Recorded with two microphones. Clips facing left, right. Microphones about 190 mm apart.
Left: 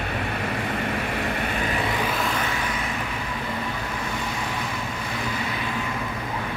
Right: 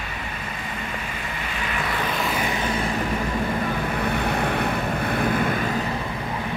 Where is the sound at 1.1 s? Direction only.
60° left (ahead or behind).